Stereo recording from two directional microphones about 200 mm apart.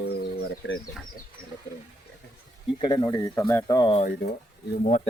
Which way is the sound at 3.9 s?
35° left (ahead or behind).